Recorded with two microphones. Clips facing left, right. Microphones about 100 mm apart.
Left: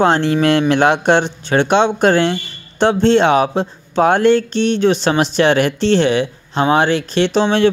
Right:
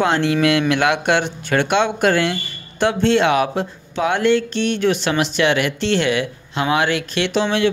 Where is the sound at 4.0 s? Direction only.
40° left (ahead or behind).